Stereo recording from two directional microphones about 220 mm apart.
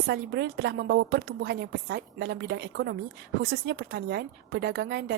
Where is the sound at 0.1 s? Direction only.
50° right (ahead or behind).